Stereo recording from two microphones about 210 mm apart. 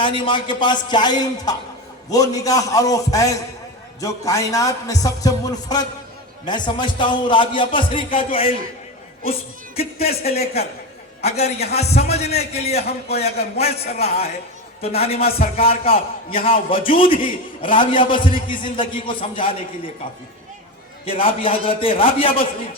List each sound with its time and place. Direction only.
0.0 s a man's voice: 25° left (ahead or behind)
9.7 s a man's voice: 30° left (ahead or behind)
21.0 s a man's voice: 25° left (ahead or behind)